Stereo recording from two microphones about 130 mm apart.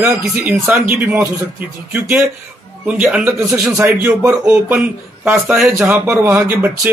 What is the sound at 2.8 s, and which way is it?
Speech, 10° right (ahead or behind).